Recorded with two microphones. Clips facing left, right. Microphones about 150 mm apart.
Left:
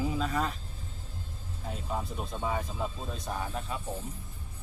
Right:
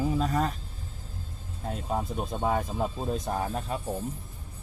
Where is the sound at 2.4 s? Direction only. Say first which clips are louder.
Right 5 dB; 50° right (ahead or behind).